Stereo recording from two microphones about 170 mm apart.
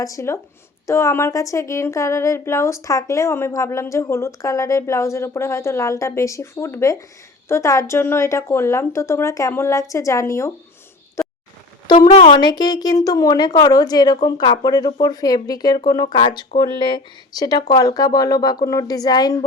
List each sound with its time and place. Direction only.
0.0 s a woman's voice: 20° left (ahead or behind)
11.2 s a sound: 15° left (ahead or behind)
12.1 s a woman's voice: 30° left (ahead or behind)